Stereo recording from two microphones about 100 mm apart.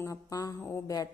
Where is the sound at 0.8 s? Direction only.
35° left (ahead or behind).